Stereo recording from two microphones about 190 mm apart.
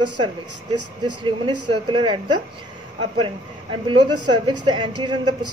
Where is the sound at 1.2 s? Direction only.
25° right (ahead or behind).